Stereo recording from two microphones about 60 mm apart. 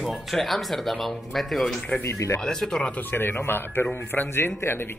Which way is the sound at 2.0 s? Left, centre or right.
Left.